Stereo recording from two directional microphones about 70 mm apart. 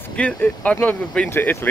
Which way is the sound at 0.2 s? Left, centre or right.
Left.